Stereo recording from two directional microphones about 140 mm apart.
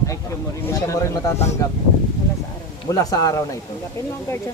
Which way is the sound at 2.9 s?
25° left (ahead or behind).